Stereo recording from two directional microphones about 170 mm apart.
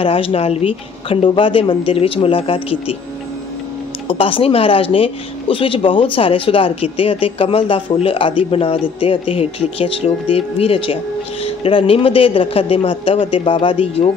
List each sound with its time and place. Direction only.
0.0 s speech: 35° left (ahead or behind)
4.1 s speech: 30° left (ahead or behind)